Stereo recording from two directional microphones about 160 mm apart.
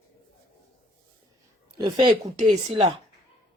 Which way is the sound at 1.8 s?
30° right (ahead or behind).